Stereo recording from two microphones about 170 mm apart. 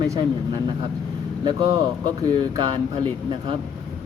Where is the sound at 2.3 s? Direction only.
30° right (ahead or behind).